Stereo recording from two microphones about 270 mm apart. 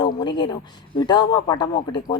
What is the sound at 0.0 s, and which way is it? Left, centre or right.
Speech, centre.